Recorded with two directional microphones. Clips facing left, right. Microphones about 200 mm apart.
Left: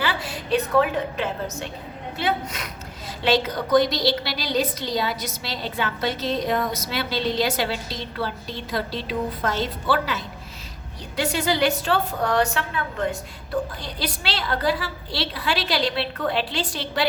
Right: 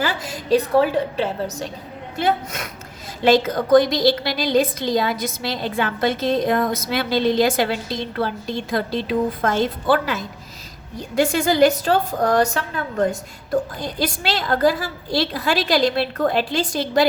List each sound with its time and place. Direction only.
0.0 s a woman's voice: 45° right (ahead or behind)
2.1 s a woman's voice: 45° right (ahead or behind)